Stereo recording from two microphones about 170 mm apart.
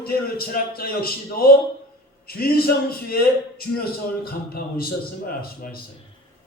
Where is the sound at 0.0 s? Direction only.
60° left (ahead or behind).